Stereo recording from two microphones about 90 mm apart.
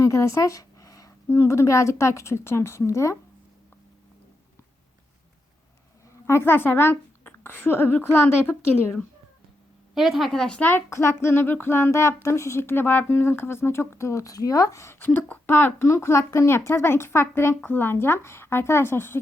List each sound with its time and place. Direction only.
0.0 s a sound: 35° left (ahead or behind)
1.3 s a woman's voice: 30° left (ahead or behind)
6.2 s speech: 25° left (ahead or behind)
9.9 s speech: centre (ahead or behind); by 10.8 s 20° left (ahead or behind)
10.8 s speech: 30° left (ahead or behind)